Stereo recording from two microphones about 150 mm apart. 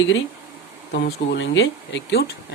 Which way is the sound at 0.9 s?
90° left.